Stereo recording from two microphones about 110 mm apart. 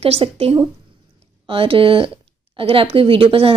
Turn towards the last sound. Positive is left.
turn(degrees=-55)  # may be behind; listen again after turning